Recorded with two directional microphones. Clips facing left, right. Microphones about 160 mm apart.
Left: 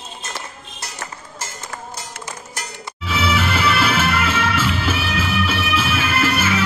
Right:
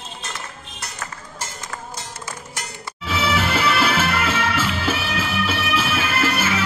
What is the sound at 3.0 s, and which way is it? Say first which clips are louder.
Music: left 1 dB; 40° right (ahead or behind).